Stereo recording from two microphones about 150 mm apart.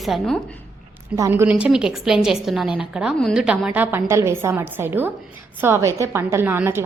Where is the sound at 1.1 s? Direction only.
20° right (ahead or behind).